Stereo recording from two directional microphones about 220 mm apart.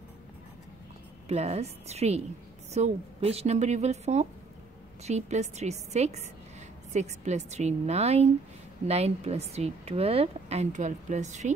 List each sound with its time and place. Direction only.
1.3 s a woman's voice: 30° right (ahead or behind)